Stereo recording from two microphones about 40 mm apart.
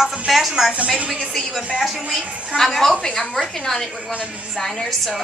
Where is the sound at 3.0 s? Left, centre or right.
Centre.